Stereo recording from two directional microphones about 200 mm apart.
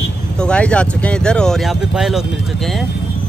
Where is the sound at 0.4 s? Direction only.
5° left (ahead or behind).